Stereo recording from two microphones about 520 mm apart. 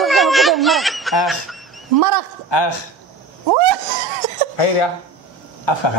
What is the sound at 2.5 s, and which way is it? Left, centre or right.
Speech, left.